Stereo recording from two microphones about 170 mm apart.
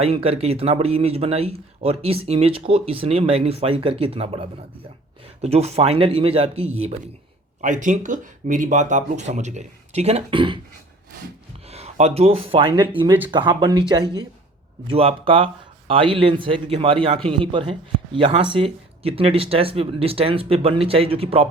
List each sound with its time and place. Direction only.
0.0 s speech: 35° right (ahead or behind)
11.7 s a man's voice: 40° right (ahead or behind)